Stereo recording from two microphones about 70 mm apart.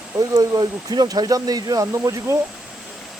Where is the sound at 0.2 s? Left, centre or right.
Right.